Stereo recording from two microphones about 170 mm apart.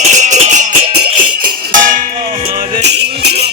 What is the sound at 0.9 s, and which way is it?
Music, 70° right (ahead or behind).